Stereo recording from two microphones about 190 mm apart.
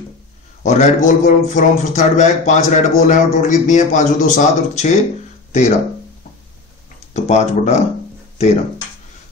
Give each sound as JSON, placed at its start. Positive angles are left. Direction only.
{"t": 0.7, "sound": "a man's voice", "side_deg": 40}
{"t": 7.2, "sound": "a man's voice", "side_deg": 35}